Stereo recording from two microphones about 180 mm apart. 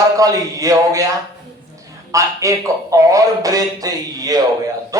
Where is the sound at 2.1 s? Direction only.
20° right (ahead or behind).